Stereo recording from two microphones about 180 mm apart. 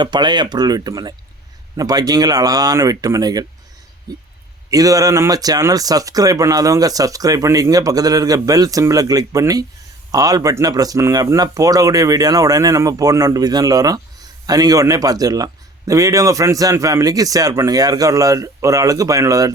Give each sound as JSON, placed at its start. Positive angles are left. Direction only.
{"t": 0.0, "sound": "speech", "side_deg": -25}